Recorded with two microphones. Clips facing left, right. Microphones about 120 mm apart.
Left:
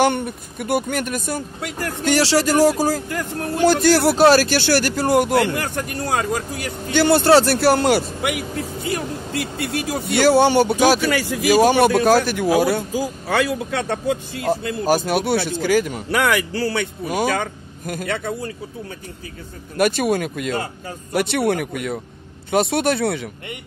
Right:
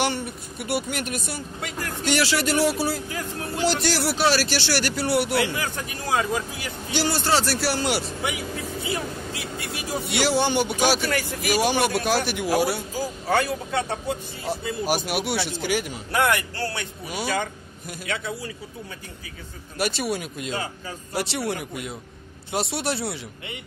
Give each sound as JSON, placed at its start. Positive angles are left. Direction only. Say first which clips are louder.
{"t": 0.0, "sound": "speech", "louder": "left 7 dB", "side_deg": 50}
{"t": 3.1, "sound": "speech", "louder": "left 6 dB", "side_deg": 55}
{"t": 8.3, "sound": "speech", "louder": "left 5 dB", "side_deg": 65}
{"t": 10.1, "sound": "speech", "louder": "left 8 dB", "side_deg": 55}
{"t": 11.1, "sound": "speech", "louder": "left 7 dB", "side_deg": 90}
{"t": 11.7, "sound": "speech", "louder": "left 8 dB", "side_deg": 50}
{"t": 13.3, "sound": "speech", "louder": "left 2 dB", "side_deg": 90}
{"t": 14.6, "sound": "speech", "louder": "left 3 dB", "side_deg": 65}
{"t": 15.3, "sound": "speech", "louder": "left 7 dB", "side_deg": 45}
{"t": 15.9, "sound": "speech", "louder": "left 3 dB", "side_deg": 90}
{"t": 17.1, "sound": "speech", "louder": "left 5 dB", "side_deg": 50}
{"t": 19.8, "sound": "speech", "louder": "left 8 dB", "side_deg": 50}